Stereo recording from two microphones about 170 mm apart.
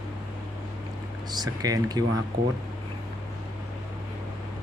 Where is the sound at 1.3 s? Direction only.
20° right (ahead or behind).